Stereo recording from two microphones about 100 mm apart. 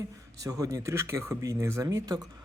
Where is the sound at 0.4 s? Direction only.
35° right (ahead or behind).